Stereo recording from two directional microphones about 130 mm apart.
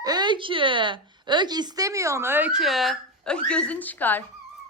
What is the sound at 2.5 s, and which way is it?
Speech, centre (ahead or behind).